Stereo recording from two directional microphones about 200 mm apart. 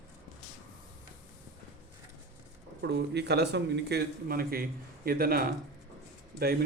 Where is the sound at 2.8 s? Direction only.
55° right (ahead or behind).